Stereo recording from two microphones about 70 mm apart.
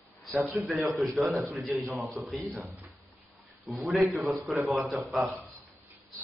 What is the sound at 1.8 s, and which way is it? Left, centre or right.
Speech, right.